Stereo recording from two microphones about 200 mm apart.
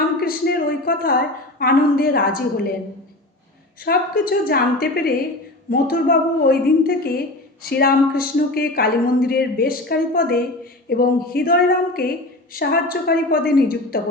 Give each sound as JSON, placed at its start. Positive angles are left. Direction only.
{"t": 0.2, "sound": "speech", "side_deg": 50}
{"t": 3.8, "sound": "speech", "side_deg": 50}